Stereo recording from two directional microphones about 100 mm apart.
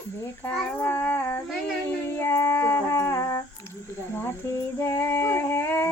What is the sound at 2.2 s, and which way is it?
Music, 25° left (ahead or behind).